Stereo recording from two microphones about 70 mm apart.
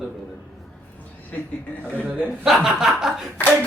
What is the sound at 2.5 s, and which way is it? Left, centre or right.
Speech, centre.